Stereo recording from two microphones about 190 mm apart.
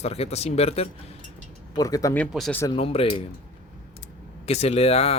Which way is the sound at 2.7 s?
30° left (ahead or behind).